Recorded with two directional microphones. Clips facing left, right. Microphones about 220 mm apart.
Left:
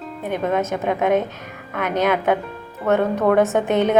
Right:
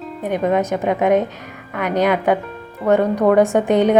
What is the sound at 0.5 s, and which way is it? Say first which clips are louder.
Speech: right 3 dB; 15° right (ahead or behind).